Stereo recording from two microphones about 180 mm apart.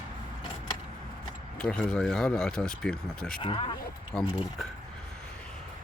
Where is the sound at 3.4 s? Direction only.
30° left (ahead or behind).